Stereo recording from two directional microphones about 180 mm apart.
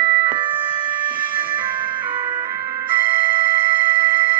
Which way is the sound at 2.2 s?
25° right (ahead or behind).